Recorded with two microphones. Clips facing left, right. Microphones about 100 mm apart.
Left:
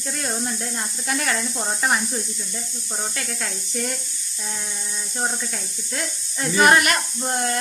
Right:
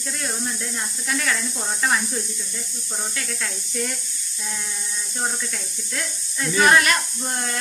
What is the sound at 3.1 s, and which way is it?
Speech, 35° left (ahead or behind).